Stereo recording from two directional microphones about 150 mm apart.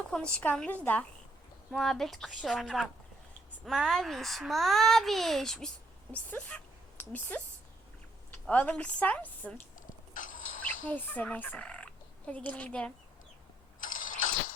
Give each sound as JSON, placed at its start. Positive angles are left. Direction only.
{"t": 0.1, "sound": "a woman's voice", "side_deg": 5}
{"t": 8.4, "sound": "a woman's voice", "side_deg": 10}
{"t": 10.2, "sound": "a sound", "side_deg": 60}
{"t": 10.9, "sound": "speech", "side_deg": 10}
{"t": 13.8, "sound": "engine starting", "side_deg": 65}